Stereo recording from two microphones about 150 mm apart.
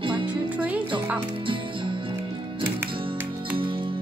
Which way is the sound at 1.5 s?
35° right (ahead or behind).